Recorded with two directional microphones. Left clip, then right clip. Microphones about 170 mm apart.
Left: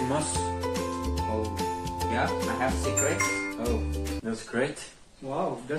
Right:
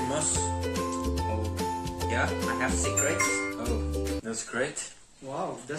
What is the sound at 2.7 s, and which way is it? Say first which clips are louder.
Speech: even; centre (ahead or behind).